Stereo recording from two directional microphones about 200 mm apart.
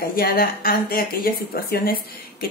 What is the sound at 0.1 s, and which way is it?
Speech, 45° left (ahead or behind).